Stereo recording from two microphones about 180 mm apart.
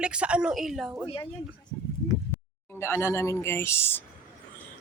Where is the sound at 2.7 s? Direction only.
15° left (ahead or behind).